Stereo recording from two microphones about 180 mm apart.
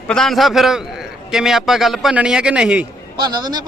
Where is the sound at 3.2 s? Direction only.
25° right (ahead or behind).